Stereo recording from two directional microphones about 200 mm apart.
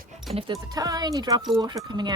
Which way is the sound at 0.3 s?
20° right (ahead or behind).